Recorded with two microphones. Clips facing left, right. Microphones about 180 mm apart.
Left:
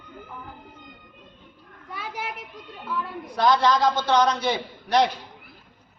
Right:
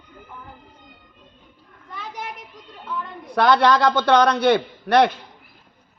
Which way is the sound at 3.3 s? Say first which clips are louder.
Right 3 dB; 65° right (ahead or behind).